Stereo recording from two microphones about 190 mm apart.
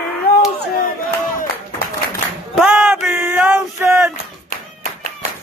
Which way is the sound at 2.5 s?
5° right (ahead or behind).